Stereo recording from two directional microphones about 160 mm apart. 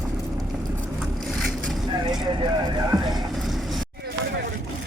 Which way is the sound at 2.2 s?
25° right (ahead or behind).